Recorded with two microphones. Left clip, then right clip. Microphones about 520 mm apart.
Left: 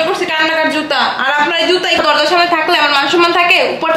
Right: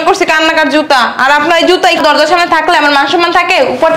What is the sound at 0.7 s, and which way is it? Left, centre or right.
A man's voice, right.